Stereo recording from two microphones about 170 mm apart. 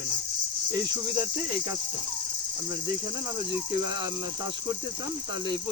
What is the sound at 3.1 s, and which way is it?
Speech, 25° right (ahead or behind).